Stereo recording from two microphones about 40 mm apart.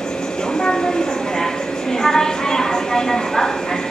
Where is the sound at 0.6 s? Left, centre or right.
Centre.